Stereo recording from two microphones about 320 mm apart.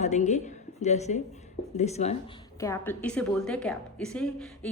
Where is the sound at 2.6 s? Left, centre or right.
Centre.